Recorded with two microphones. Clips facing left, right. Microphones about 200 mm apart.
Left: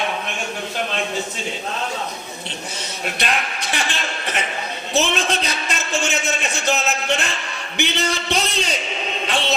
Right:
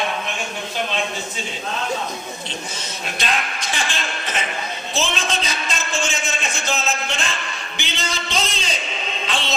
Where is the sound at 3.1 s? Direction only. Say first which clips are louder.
Even; 65° left (ahead or behind).